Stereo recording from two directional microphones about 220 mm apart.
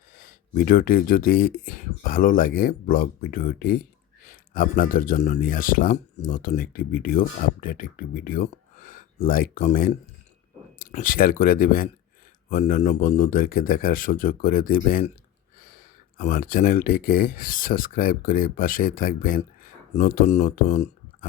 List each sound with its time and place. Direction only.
0.2 s speech: 40° left (ahead or behind)